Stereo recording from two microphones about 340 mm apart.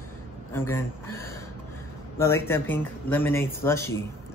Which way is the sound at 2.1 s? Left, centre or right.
Centre.